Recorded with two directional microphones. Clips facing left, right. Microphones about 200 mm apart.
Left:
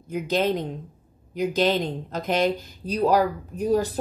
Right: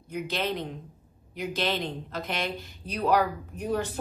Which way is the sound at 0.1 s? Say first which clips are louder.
Left 7 dB; 40° left (ahead or behind).